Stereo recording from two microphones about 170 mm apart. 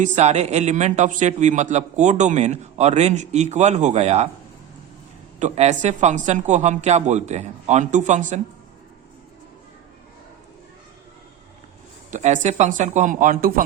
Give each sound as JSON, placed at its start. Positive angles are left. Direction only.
{"t": 0.0, "sound": "speech", "side_deg": -40}
{"t": 5.4, "sound": "speech", "side_deg": -40}
{"t": 12.1, "sound": "speech", "side_deg": -45}